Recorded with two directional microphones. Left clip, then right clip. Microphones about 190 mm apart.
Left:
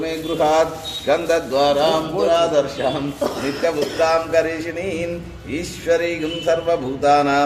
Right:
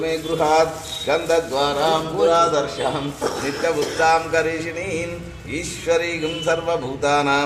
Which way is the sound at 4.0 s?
30° left (ahead or behind).